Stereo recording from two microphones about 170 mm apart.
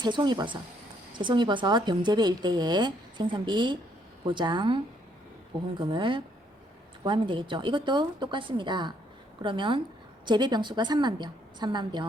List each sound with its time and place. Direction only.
0.0 s speech: 25° right (ahead or behind)
5.8 s speech: 30° right (ahead or behind)